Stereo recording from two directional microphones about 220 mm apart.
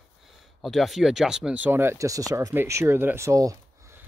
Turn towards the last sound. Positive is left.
turn(degrees=-15)  # may be behind; listen again after turning